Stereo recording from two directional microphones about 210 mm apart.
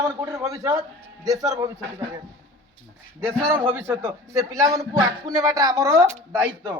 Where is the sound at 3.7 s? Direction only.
10° right (ahead or behind).